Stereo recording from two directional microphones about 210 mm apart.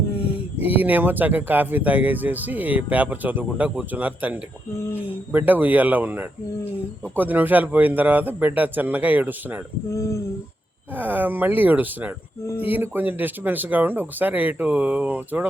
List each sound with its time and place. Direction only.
0.2 s a sound: 25° left (ahead or behind)
0.6 s speech: 10° right (ahead or behind)
9.9 s speech: 15° left (ahead or behind)
10.9 s speech: 10° right (ahead or behind)